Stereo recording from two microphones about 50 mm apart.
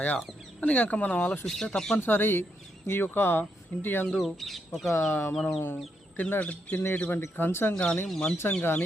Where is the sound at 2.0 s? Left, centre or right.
Left.